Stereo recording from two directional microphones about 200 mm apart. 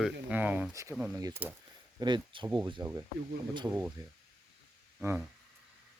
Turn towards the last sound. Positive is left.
turn(degrees=-10)  # may be behind; listen again after turning